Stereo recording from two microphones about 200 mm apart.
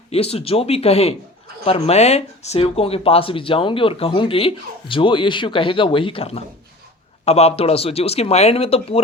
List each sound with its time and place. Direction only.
0.1 s speech: 30° left (ahead or behind)